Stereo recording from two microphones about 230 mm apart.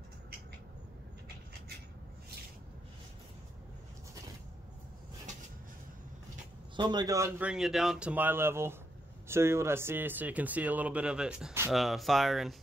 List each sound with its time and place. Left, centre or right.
6.8 s speech: centre